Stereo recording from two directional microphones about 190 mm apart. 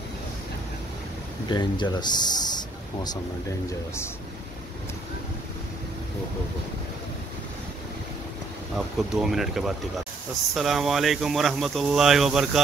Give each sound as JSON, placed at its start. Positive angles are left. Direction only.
{"t": 1.5, "sound": "speech", "side_deg": 25}
{"t": 8.7, "sound": "speech", "side_deg": 0}